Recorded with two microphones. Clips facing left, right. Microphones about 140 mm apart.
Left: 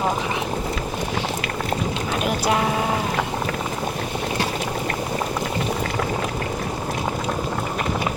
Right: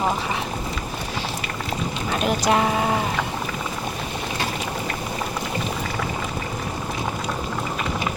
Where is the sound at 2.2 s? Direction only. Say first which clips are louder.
Right 2 dB; 5° left (ahead or behind).